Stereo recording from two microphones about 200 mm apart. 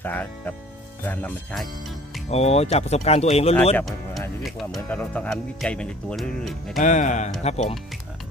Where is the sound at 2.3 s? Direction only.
30° left (ahead or behind).